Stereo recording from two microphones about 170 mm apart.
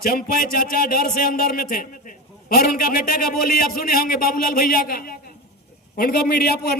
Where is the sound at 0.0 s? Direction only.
60° left (ahead or behind).